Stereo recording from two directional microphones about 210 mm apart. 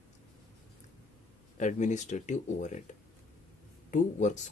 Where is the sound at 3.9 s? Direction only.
35° left (ahead or behind).